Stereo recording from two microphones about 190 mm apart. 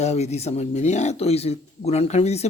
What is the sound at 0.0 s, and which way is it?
Speech, 35° left (ahead or behind).